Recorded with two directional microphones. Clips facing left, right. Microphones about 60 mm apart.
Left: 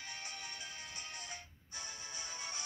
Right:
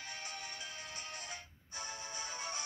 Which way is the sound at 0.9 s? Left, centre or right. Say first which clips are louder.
Right 2 dB; right.